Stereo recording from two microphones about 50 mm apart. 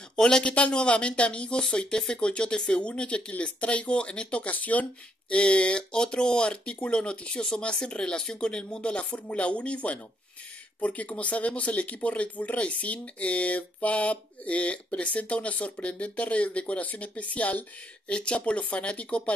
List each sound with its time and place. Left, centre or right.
0.1 s speech: centre; by 4.8 s left
5.3 s speech: left